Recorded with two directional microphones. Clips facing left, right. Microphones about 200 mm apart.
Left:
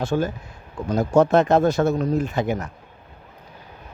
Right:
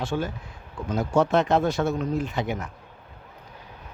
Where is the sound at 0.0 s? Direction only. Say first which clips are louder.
Left 5 dB; 40° left (ahead or behind).